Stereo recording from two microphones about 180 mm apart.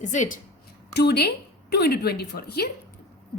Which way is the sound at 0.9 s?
65° left (ahead or behind).